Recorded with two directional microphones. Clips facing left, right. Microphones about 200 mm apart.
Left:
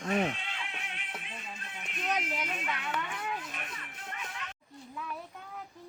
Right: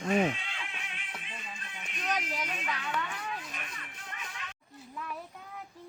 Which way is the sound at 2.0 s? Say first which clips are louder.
Left 1 dB; centre (ahead or behind).